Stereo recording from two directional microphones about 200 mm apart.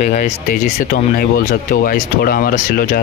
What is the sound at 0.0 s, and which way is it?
Speech, 35° left (ahead or behind).